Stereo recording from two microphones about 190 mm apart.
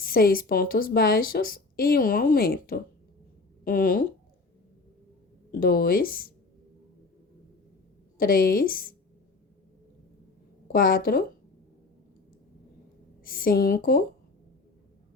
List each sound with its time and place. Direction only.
0.0 s a woman's voice: 50° left (ahead or behind)
5.5 s a woman's voice: 50° left (ahead or behind)
8.2 s a woman's voice: 50° left (ahead or behind)
10.7 s a woman's voice: 50° left (ahead or behind)
13.2 s a woman's voice: 50° left (ahead or behind)